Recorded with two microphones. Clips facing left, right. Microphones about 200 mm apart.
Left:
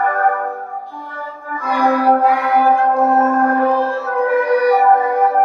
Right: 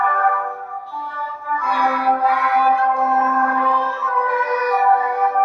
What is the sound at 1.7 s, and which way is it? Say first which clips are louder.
Music: left 7 dB; 35° left (ahead or behind).